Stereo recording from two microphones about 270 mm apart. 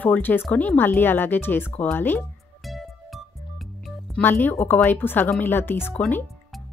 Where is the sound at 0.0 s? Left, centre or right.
Centre.